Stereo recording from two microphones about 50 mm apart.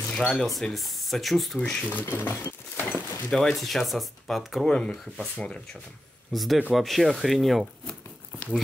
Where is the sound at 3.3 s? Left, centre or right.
Centre.